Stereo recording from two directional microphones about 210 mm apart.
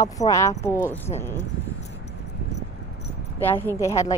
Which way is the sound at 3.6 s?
15° left (ahead or behind).